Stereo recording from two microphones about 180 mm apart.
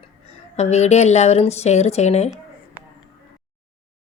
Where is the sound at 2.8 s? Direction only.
10° right (ahead or behind).